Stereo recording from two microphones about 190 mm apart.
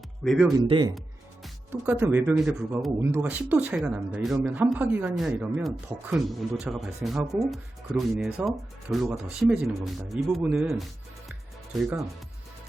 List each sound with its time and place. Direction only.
0.3 s speech: centre (ahead or behind)
0.7 s speech: 25° right (ahead or behind)
1.7 s speech: 10° right (ahead or behind)